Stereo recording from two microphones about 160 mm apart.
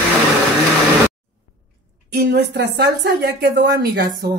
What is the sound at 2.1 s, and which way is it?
A woman's voice, 90° right.